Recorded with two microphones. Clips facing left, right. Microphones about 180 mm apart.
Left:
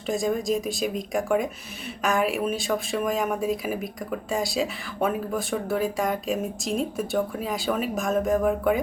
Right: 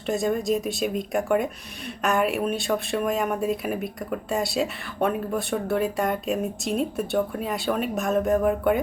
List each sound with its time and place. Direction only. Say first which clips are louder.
0.1 s speech: right 1 dB; centre (ahead or behind)